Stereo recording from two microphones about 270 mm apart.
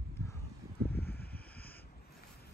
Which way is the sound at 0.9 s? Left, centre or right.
Left.